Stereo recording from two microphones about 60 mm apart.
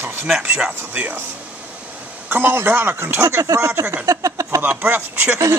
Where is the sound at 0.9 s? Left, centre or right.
Right.